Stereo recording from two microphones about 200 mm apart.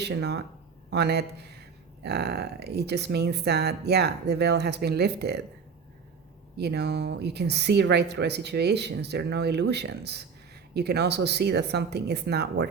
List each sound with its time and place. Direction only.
0.0 s speech: 55° right (ahead or behind)
6.6 s speech: 55° right (ahead or behind)